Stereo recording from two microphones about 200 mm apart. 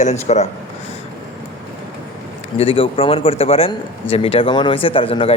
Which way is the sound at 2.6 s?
25° left (ahead or behind).